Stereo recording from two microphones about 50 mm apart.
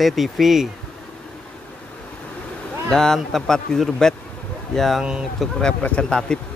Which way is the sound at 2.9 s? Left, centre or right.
Centre.